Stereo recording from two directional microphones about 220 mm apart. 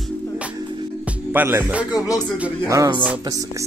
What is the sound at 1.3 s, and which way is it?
Music, 10° right (ahead or behind).